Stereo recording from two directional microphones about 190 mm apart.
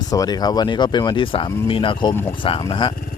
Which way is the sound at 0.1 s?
20° left (ahead or behind).